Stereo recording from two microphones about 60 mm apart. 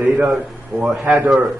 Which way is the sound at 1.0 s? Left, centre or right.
Right.